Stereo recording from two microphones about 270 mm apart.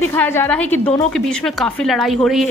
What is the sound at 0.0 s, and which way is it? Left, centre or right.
A woman's voice, centre.